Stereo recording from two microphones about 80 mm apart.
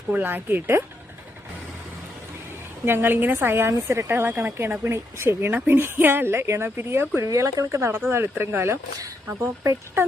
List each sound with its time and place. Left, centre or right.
0.1 s a woman's voice: right
2.8 s a woman's voice: right
7.2 s speech: right